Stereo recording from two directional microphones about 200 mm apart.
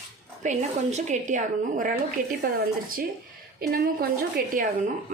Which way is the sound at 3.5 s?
50° right (ahead or behind).